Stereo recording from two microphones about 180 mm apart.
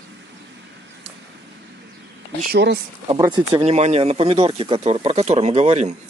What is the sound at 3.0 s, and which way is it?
Speech, 20° right (ahead or behind).